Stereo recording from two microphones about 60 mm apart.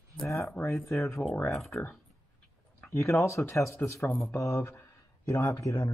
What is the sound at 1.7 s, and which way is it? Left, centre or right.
Speech, left.